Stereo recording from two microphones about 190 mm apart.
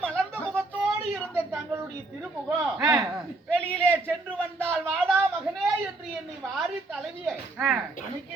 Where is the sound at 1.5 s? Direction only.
15° right (ahead or behind).